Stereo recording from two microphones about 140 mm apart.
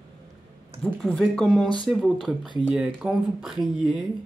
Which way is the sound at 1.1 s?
5° left (ahead or behind).